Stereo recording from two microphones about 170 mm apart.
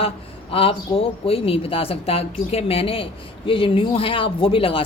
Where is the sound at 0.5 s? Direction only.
35° left (ahead or behind).